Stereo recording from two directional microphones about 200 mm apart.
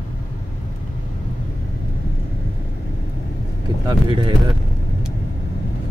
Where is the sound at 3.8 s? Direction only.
20° right (ahead or behind).